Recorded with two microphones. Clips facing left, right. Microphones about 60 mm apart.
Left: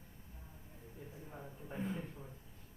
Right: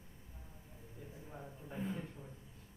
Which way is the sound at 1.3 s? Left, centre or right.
Centre.